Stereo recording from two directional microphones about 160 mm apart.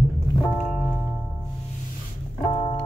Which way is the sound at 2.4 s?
30° left (ahead or behind).